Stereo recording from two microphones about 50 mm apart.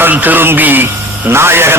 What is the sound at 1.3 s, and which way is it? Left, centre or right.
Speech, right.